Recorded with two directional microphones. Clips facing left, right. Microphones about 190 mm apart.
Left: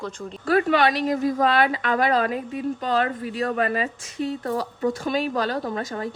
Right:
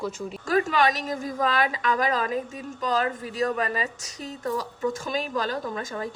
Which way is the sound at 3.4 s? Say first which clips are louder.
Left 2 dB; 45° left (ahead or behind).